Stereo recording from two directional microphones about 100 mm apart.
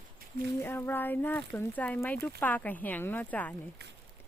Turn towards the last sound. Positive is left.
turn(degrees=15)  # may be behind; listen again after turning